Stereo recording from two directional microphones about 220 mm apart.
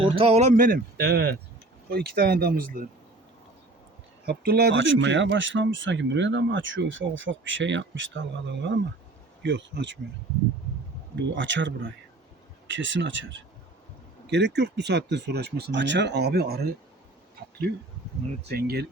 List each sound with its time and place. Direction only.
0.0 s speech: 25° right (ahead or behind)
4.3 s speech: 45° right (ahead or behind)
11.3 s speech: 55° right (ahead or behind)
18.4 s speech: 45° right (ahead or behind)